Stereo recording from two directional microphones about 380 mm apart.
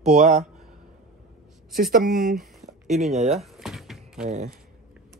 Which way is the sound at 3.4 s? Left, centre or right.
Centre.